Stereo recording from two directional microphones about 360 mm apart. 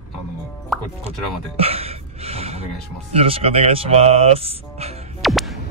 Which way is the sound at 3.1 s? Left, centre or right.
Centre.